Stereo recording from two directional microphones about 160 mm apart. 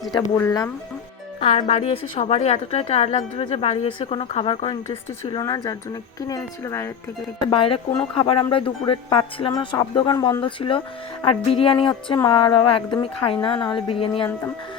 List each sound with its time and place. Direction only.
0.1 s speech: 20° left (ahead or behind)
1.4 s a woman's voice: 35° left (ahead or behind)
5.4 s speech: 25° left (ahead or behind)
7.4 s a woman's voice: 35° left (ahead or behind)